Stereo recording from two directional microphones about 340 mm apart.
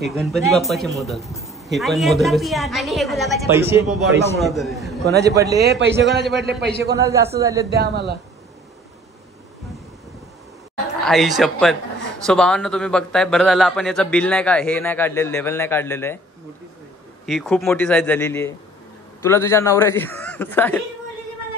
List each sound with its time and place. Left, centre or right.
0.0 s a man's voice: centre
5.6 s a man's voice: right
7.0 s a man's voice: centre
7.7 s a man's voice: right
11.1 s speech: centre
17.3 s a man's voice: centre